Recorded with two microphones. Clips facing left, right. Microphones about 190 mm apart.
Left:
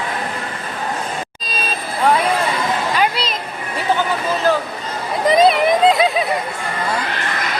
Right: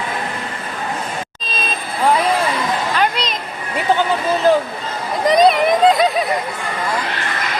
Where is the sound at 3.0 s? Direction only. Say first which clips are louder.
Even; 5° left (ahead or behind).